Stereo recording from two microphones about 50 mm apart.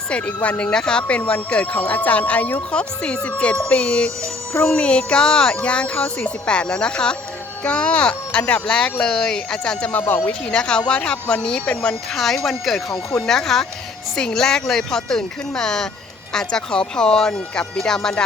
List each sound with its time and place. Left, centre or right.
0.1 s speech: left
12.1 s speech: centre